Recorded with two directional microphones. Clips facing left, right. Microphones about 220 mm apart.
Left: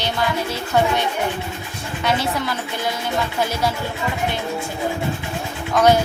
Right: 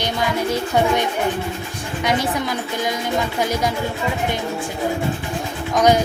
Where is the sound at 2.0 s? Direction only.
15° right (ahead or behind).